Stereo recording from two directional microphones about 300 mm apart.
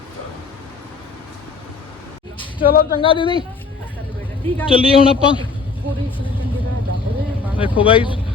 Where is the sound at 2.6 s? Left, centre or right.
Left.